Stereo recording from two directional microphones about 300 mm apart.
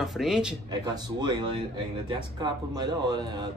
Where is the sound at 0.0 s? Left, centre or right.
Centre.